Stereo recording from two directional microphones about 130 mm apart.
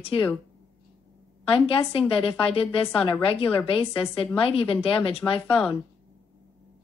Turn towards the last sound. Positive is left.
turn(degrees=45)  # may be behind; listen again after turning